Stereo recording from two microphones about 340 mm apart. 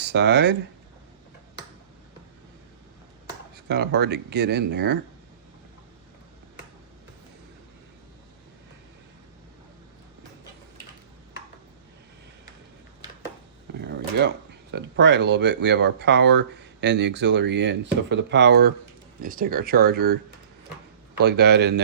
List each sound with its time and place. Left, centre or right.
0.0 s speech: right
3.5 s speech: right
13.7 s speech: right
21.2 s speech: right